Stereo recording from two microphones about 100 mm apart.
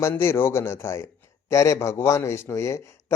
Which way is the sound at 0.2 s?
25° left (ahead or behind).